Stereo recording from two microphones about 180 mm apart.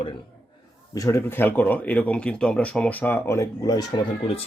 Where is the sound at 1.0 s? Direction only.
15° left (ahead or behind).